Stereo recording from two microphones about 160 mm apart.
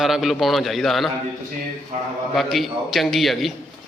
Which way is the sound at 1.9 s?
45° right (ahead or behind).